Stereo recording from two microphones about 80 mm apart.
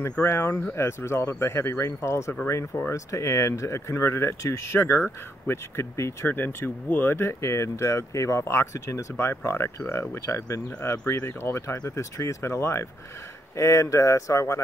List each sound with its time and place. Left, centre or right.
0.2 s speech: left